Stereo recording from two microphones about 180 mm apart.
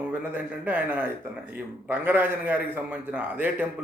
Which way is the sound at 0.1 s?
10° right (ahead or behind).